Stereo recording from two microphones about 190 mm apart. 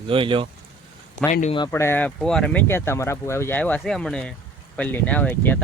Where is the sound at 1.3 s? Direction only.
35° left (ahead or behind).